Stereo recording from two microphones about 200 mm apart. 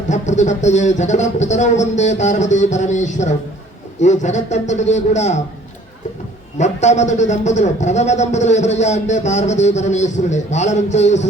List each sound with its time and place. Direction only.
0.1 s a man's voice: 35° left (ahead or behind)
6.6 s a man's voice: 35° left (ahead or behind)